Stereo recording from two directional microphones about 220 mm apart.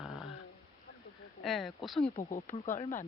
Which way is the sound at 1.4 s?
Centre (ahead or behind).